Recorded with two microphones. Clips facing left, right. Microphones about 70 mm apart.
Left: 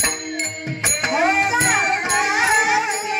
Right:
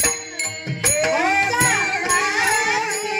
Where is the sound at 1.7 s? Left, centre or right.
Left.